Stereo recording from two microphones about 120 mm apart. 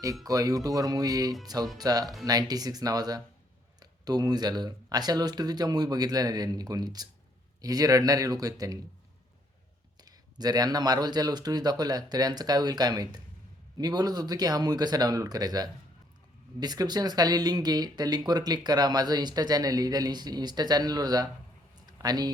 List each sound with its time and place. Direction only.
0.3 s speech: 30° right (ahead or behind)
10.0 s speech: 35° right (ahead or behind)
21.8 s a sound: 35° right (ahead or behind)